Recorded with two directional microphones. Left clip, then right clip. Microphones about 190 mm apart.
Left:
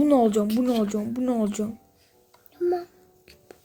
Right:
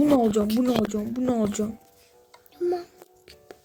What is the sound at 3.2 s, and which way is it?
Music, 20° right (ahead or behind).